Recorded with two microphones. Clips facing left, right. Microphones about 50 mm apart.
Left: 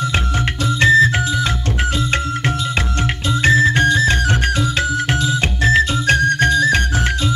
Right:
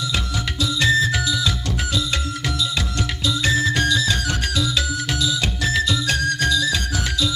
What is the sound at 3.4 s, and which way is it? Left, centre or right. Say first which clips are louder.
Music: left 7 dB; left.